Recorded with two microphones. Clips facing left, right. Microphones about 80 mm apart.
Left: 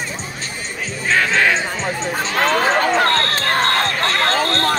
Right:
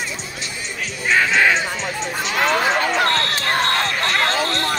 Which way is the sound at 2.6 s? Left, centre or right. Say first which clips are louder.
Left 3 dB; left.